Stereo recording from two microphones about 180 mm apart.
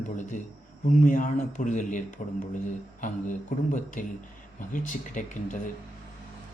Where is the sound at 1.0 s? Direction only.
45° left (ahead or behind).